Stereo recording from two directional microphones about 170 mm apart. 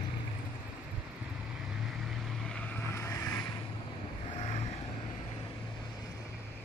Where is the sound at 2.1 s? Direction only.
Centre (ahead or behind).